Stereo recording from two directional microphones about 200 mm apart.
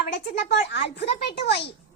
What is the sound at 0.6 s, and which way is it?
Speech, 55° left (ahead or behind).